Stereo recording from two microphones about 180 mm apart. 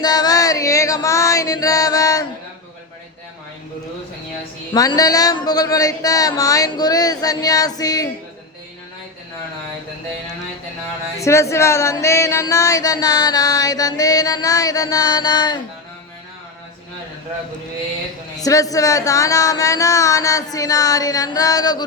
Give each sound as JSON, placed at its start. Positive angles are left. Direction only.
{"t": 0.0, "sound": "chant", "side_deg": 20}
{"t": 4.7, "sound": "speech", "side_deg": 20}
{"t": 11.2, "sound": "speech", "side_deg": 15}
{"t": 18.4, "sound": "speech", "side_deg": 20}